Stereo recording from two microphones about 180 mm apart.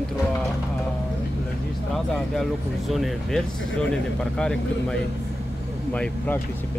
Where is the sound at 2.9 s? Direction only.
Centre (ahead or behind).